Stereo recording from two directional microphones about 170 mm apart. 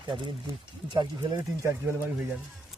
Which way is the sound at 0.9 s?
15° right (ahead or behind).